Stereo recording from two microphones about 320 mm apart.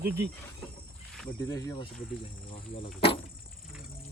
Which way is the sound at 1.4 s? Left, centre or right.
Centre.